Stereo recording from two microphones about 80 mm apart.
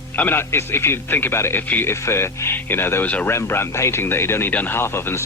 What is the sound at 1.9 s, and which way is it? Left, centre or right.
Speech, left.